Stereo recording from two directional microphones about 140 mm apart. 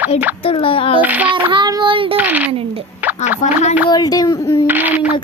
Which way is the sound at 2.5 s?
45° right (ahead or behind).